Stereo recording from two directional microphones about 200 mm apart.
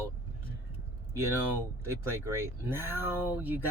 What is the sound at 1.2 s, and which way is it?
Speech, 15° right (ahead or behind).